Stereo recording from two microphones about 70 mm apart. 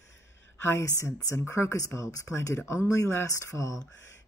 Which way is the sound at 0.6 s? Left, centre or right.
Left.